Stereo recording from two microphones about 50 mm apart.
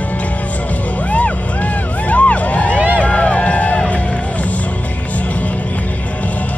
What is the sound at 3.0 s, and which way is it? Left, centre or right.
Run, left.